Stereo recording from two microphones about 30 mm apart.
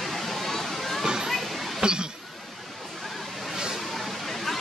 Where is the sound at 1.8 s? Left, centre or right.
Right.